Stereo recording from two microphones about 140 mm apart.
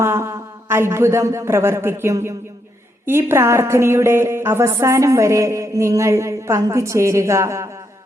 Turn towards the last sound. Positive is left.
turn(degrees=-20)  # may be behind; listen again after turning